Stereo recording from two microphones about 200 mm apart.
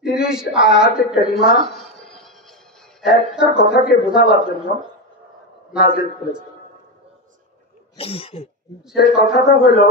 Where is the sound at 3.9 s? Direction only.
55° left (ahead or behind).